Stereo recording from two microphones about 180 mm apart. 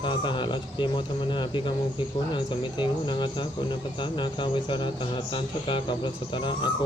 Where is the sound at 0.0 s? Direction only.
25° left (ahead or behind).